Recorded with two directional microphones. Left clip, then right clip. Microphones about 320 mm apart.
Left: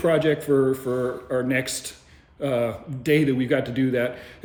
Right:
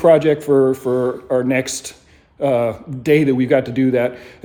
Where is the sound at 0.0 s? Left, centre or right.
Centre.